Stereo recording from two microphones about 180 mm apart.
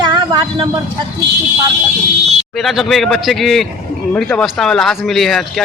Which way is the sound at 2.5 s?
Centre (ahead or behind).